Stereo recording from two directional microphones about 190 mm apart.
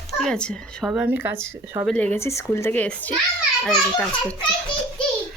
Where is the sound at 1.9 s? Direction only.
10° left (ahead or behind).